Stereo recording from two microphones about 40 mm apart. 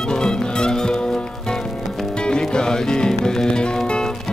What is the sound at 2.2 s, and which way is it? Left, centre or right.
Music, left.